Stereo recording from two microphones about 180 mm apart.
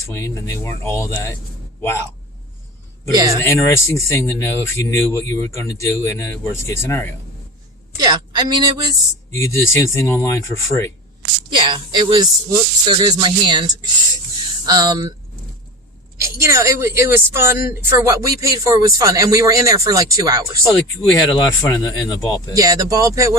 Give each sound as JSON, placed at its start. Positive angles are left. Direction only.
{"t": 0.1, "sound": "speech", "side_deg": 15}
{"t": 3.1, "sound": "speech", "side_deg": -20}
{"t": 3.4, "sound": "speech", "side_deg": 15}
{"t": 7.9, "sound": "a woman's voice", "side_deg": -25}
{"t": 9.3, "sound": "speech", "side_deg": 15}
{"t": 11.5, "sound": "speech", "side_deg": -25}
{"t": 16.4, "sound": "speech", "side_deg": -15}
{"t": 21.1, "sound": "speech", "side_deg": 20}
{"t": 22.5, "sound": "speech", "side_deg": -20}